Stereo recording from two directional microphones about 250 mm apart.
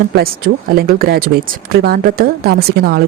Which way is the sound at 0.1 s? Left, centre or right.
Right.